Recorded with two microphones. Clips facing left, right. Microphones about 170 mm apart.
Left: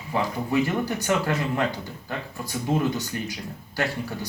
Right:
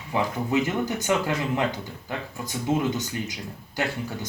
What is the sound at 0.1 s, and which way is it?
Speech, 20° right (ahead or behind).